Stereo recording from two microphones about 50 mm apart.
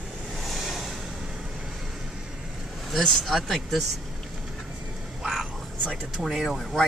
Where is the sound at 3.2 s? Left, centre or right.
Centre.